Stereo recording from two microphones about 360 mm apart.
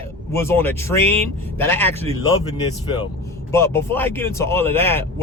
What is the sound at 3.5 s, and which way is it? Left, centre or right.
Speech, centre.